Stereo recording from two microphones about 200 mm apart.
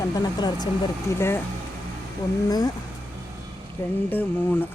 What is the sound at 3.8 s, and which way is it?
Speech, 10° left (ahead or behind).